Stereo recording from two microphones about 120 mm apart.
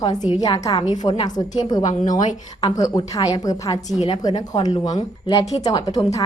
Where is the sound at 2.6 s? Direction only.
30° left (ahead or behind).